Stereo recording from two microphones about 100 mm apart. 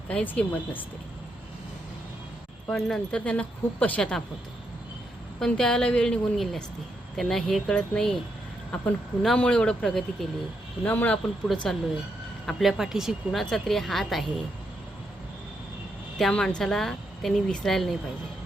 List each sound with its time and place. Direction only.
0.1 s speech: 10° left (ahead or behind)
2.6 s speech: 5° left (ahead or behind)
5.4 s speech: 10° left (ahead or behind)
9.2 s speech: 10° left (ahead or behind)
10.8 s speech: 15° left (ahead or behind)
11.4 s speech: 5° left (ahead or behind)
16.1 s speech: 5° left (ahead or behind)